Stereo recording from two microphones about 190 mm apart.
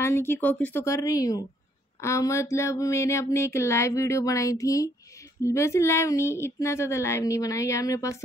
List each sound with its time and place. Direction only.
0.0 s speech: 10° left (ahead or behind)